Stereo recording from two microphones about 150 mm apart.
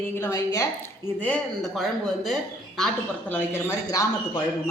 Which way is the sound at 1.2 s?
10° left (ahead or behind).